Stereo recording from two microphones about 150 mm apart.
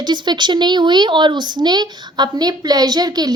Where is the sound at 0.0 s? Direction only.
30° right (ahead or behind).